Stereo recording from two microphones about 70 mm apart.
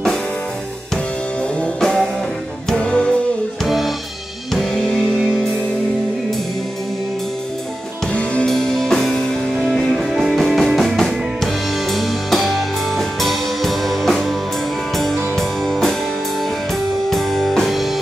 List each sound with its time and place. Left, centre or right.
1.6 s music: centre
3.6 s music: centre
8.1 s music: centre
8.5 s music: centre
9.6 s music: centre
15.3 s music: centre
17.1 s music: centre